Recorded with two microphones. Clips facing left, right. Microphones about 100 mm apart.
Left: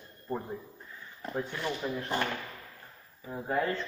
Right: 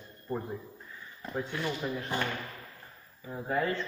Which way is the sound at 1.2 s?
Centre (ahead or behind).